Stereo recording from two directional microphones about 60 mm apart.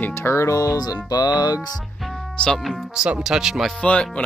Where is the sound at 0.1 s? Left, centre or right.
Left.